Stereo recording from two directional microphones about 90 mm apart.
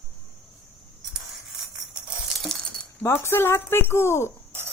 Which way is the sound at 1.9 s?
5° right (ahead or behind).